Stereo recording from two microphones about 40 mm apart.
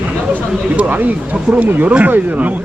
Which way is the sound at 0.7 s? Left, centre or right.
Right.